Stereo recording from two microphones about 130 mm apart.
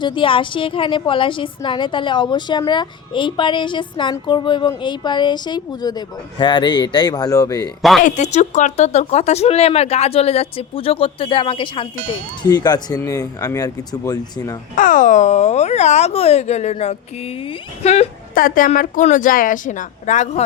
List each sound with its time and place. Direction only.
0.0 s a woman's voice: 40° left (ahead or behind)
7.8 s speech: centre (ahead or behind)
8.0 s a woman's voice: 65° left (ahead or behind); by 14.6 s 30° left (ahead or behind)
14.8 s speech: 90° left; by 18.1 s 55° left (ahead or behind)
18.3 s a woman's voice: 90° left; by 20.4 s 65° left (ahead or behind)